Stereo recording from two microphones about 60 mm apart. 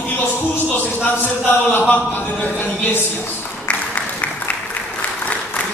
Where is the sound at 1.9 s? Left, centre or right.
Left.